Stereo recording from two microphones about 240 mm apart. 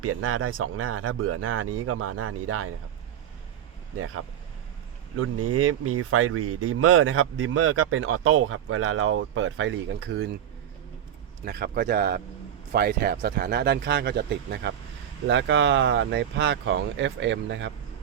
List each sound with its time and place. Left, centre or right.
0.0 s speech: right
3.9 s speech: right
5.1 s speech: right
11.4 s speech: right